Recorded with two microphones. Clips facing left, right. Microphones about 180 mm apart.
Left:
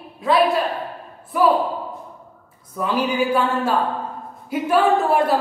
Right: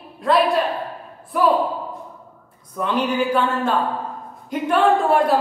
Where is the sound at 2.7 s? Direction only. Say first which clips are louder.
Even; 5° left (ahead or behind).